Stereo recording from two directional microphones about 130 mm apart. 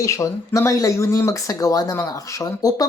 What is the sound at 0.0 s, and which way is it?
Speech, 25° left (ahead or behind).